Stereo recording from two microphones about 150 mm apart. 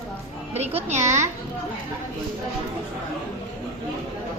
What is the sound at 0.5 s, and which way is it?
Speech, 45° right (ahead or behind).